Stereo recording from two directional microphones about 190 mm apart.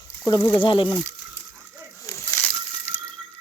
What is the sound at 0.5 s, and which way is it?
Speech, 25° left (ahead or behind).